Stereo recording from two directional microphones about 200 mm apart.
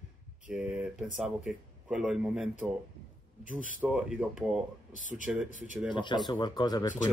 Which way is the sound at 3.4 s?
40° right (ahead or behind).